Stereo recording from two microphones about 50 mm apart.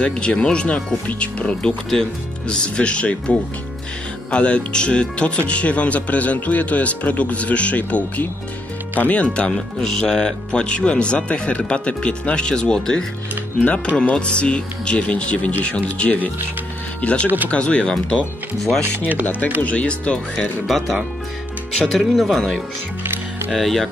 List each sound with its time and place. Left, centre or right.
0.0 s speech: left
9.5 s speech: centre
13.6 s speech: left
17.2 s speech: right
17.5 s speech: left
19.6 s speech: left
20.3 s speech: centre
23.0 s music: right
23.5 s speech: centre